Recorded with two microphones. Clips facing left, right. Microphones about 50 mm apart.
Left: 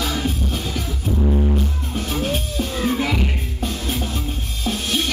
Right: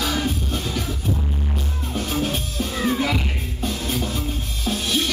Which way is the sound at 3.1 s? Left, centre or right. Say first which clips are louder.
Left 2 dB; left.